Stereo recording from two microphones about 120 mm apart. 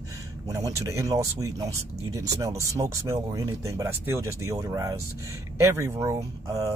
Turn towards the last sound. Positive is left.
turn(degrees=-25)  # may be behind; listen again after turning